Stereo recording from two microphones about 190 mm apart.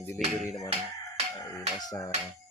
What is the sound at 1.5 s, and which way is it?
Speech, 20° left (ahead or behind).